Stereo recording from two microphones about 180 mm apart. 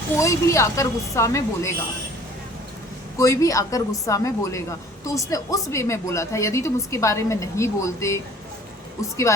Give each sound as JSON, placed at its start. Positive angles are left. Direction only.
{"t": 0.2, "sound": "speech", "side_deg": 15}
{"t": 3.2, "sound": "speech", "side_deg": 20}